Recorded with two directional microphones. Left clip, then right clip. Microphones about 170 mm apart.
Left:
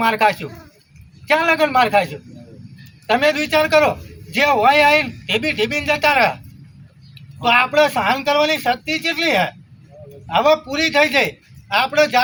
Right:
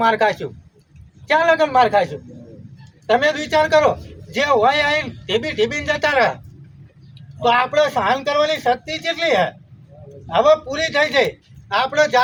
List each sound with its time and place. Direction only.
0.0 s a man's voice: 25° right (ahead or behind)
3.1 s a man's voice: 20° right (ahead or behind)
7.4 s a man's voice: 20° right (ahead or behind)